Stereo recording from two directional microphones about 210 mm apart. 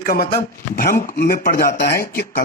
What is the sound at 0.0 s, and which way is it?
A man's voice, 45° left (ahead or behind).